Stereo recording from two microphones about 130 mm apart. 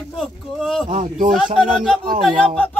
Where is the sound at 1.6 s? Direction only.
5° left (ahead or behind).